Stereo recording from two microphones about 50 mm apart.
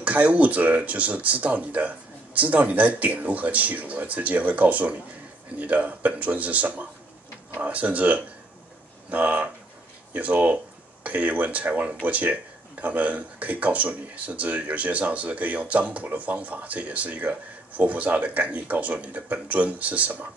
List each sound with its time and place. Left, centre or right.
0.0 s speech: right